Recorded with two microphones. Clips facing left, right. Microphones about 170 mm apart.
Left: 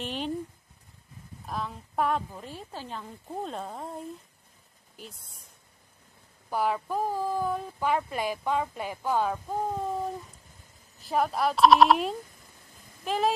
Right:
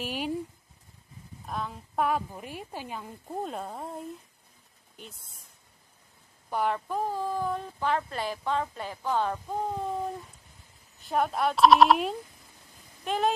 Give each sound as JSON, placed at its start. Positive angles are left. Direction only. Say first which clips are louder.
{"t": 0.0, "sound": "a sound", "louder": "even", "side_deg": -5}
{"t": 1.4, "sound": "a woman's voice", "louder": "even", "side_deg": 0}
{"t": 6.5, "sound": "a woman's voice", "louder": "left 1 dB", "side_deg": 5}